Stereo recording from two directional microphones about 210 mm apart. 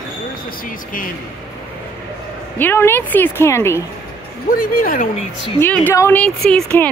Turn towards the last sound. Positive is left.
turn(degrees=5)  # may be behind; listen again after turning